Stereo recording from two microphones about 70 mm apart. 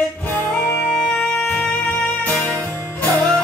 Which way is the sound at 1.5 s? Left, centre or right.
Left.